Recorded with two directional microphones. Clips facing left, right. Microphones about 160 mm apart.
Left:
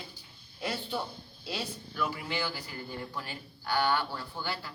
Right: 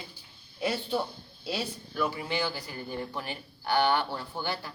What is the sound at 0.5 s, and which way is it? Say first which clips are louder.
A man's voice: right 5 dB; 15° right (ahead or behind).